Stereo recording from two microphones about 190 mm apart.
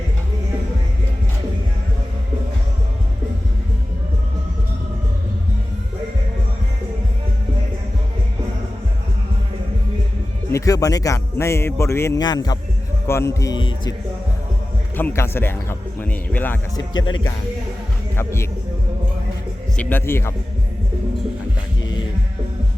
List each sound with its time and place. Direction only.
10.5 s speech: 20° left (ahead or behind)
14.9 s speech: 10° left (ahead or behind)
16.9 s speech: 90° left
18.2 s speech: 15° left (ahead or behind)
19.7 s speech: 10° left (ahead or behind)